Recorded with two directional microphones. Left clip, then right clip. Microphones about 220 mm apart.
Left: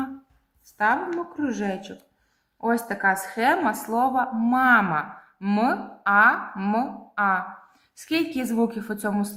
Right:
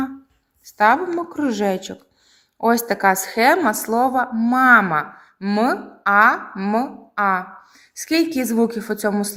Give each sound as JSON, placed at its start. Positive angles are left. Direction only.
{"t": 0.6, "sound": "a woman's voice", "side_deg": -40}